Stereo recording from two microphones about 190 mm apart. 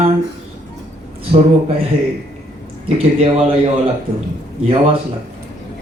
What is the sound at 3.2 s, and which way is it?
Speech, 35° right (ahead or behind).